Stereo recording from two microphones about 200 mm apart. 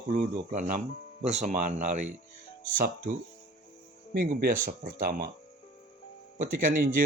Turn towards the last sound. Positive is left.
turn(degrees=-45)  # may be behind; listen again after turning